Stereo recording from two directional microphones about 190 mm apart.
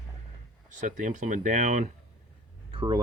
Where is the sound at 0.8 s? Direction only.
40° right (ahead or behind).